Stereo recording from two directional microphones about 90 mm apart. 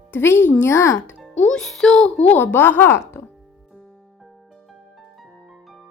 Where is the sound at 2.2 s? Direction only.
20° left (ahead or behind).